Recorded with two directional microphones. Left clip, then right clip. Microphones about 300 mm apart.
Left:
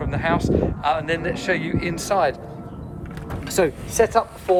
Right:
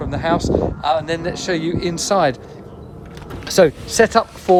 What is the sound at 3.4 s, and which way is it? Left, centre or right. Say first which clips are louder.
Speech: right 7 dB; right.